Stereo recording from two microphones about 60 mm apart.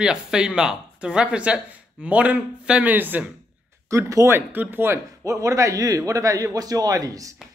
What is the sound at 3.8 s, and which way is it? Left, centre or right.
Speech, right.